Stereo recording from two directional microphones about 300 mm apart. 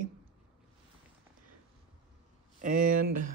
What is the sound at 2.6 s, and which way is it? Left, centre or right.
Speech, right.